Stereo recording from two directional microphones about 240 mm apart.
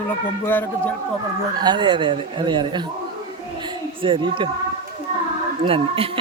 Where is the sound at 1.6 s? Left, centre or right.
Centre.